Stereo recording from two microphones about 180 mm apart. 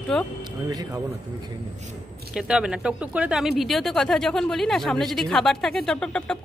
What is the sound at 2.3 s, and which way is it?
Speech, 5° right (ahead or behind).